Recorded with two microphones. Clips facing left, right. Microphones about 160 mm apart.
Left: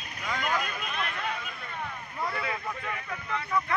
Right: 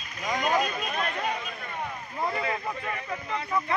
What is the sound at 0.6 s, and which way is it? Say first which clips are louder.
Speech: right 5 dB; 40° right (ahead or behind).